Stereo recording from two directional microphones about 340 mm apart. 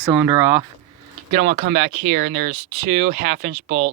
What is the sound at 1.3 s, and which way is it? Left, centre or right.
Speech, right.